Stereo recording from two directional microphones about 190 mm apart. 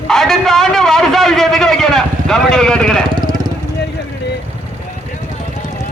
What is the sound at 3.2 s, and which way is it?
Vehicle, 20° right (ahead or behind).